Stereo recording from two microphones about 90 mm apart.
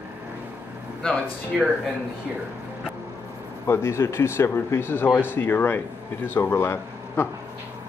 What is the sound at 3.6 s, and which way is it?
Speech, 30° left (ahead or behind).